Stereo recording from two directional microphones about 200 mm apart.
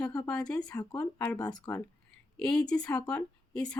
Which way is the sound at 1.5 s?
20° left (ahead or behind).